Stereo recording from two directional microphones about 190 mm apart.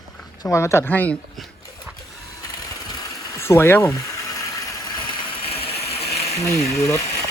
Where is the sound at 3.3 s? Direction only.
15° left (ahead or behind); by 5.7 s 30° left (ahead or behind).